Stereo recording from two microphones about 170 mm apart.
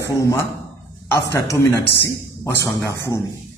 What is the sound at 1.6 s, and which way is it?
A man's voice, 15° left (ahead or behind).